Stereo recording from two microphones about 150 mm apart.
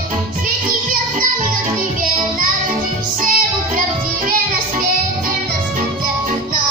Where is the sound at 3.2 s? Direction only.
65° right (ahead or behind).